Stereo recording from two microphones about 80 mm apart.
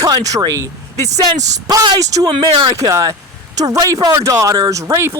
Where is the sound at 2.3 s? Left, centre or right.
Right.